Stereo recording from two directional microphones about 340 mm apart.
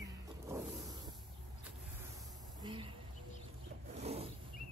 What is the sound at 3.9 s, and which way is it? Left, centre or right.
Wild animals, centre.